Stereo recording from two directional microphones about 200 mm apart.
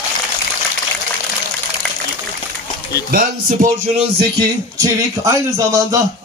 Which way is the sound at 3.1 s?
45° right (ahead or behind).